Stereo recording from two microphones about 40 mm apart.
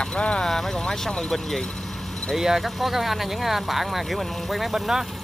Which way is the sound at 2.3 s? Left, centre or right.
Centre.